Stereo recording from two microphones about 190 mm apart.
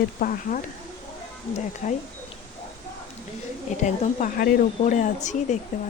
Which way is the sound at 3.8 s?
40° left (ahead or behind).